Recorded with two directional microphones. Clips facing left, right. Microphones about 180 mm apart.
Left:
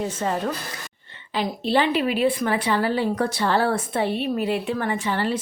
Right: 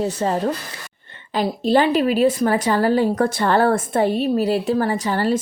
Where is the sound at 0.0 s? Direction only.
35° right (ahead or behind).